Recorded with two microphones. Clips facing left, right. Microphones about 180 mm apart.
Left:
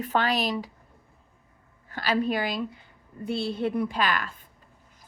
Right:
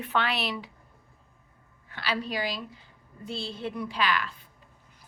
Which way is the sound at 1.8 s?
45° left (ahead or behind).